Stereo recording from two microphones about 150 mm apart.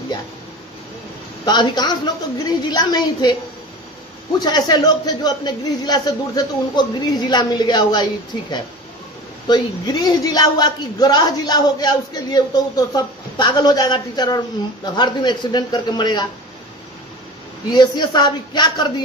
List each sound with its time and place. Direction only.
1.4 s speech: 30° left (ahead or behind)
4.4 s speech: 25° left (ahead or behind)
17.6 s speech: 30° left (ahead or behind)